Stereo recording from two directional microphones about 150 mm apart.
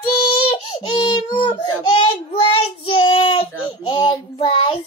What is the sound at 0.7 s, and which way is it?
Baby cry, 30° left (ahead or behind).